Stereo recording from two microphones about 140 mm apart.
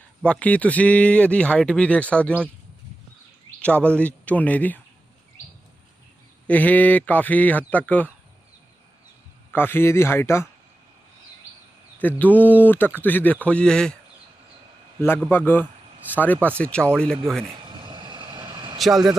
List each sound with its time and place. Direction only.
0.2 s speech: 10° left (ahead or behind)
3.6 s speech: 10° left (ahead or behind)
6.5 s speech: 10° left (ahead or behind)
9.5 s speech: 15° left (ahead or behind)
11.9 s speech: 10° left (ahead or behind)
15.0 s speech: 15° left (ahead or behind)
17.7 s vehicle: 35° right (ahead or behind)